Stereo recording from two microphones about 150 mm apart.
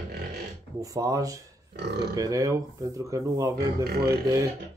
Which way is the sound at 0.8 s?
20° right (ahead or behind).